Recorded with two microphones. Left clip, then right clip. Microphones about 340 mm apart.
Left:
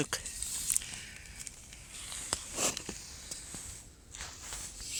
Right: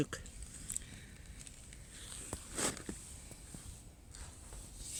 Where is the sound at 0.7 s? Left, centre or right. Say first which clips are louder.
Left 6 dB; centre.